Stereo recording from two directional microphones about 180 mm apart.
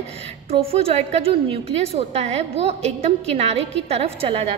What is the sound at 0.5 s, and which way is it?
A woman's voice, 35° right (ahead or behind).